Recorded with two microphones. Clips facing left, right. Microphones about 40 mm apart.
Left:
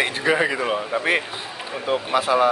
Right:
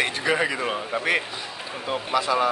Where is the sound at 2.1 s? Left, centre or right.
Left.